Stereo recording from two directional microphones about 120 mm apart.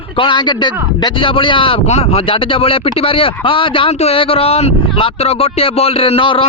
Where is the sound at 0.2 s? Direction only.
40° left (ahead or behind).